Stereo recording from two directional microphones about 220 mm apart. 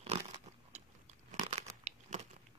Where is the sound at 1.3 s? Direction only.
30° right (ahead or behind).